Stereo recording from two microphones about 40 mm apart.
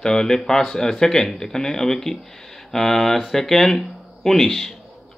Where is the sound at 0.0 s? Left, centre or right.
Centre.